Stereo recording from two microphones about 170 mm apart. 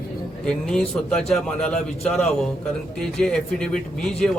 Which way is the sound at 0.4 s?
5° left (ahead or behind).